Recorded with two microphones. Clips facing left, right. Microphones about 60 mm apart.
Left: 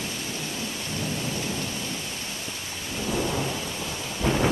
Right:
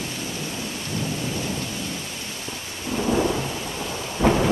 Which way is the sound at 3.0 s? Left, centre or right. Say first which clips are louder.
Right 6 dB; right.